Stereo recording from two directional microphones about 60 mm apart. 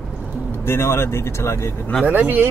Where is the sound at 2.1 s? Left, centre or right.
Right.